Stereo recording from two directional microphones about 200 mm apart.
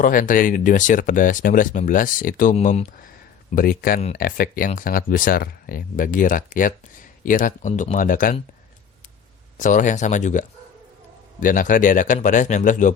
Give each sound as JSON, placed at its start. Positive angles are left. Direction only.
{"t": 0.0, "sound": "speech", "side_deg": 40}
{"t": 9.6, "sound": "speech", "side_deg": 40}